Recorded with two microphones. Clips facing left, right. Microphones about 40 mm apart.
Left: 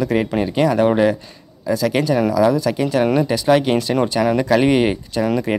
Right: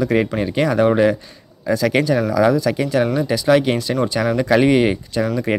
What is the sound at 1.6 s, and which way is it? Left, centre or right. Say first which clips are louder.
Speech: right 1 dB; centre.